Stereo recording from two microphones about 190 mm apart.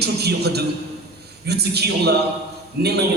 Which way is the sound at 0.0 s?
60° right (ahead or behind).